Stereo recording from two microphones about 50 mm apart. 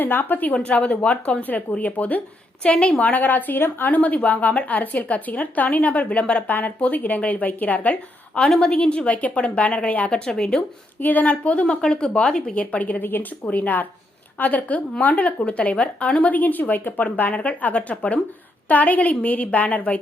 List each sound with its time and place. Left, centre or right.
0.0 s a woman's voice: left
0.5 s a woman's voice: left
8.4 s speech: centre
8.7 s a woman's voice: left
10.1 s speech: centre
11.0 s a woman's voice: left
11.4 s a woman's voice: left
12.5 s a woman's voice: left